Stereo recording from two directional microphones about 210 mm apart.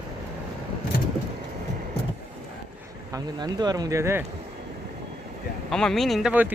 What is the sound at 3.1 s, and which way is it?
Speech, 20° right (ahead or behind).